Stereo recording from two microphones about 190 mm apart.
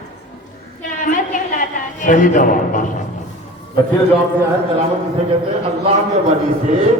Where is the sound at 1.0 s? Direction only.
45° left (ahead or behind).